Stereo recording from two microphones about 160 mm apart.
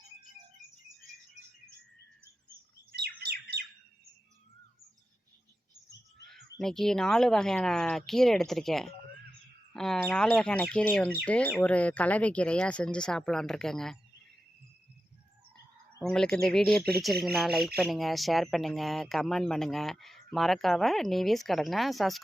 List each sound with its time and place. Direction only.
2.9 s bird: 80° right
6.2 s speech: 5° left (ahead or behind)
16.1 s speech: 5° left (ahead or behind)